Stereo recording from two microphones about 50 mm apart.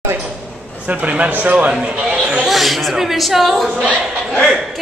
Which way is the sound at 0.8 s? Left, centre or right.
Right.